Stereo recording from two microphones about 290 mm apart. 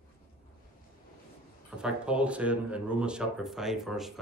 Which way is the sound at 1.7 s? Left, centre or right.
Centre.